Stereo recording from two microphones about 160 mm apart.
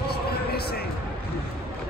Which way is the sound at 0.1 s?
80° left.